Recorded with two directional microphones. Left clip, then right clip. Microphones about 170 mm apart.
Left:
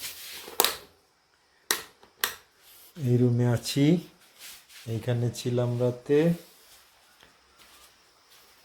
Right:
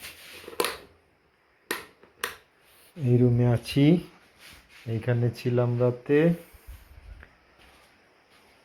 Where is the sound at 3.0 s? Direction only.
15° left (ahead or behind).